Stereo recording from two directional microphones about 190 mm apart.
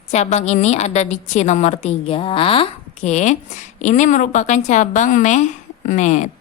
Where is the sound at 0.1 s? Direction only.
35° left (ahead or behind).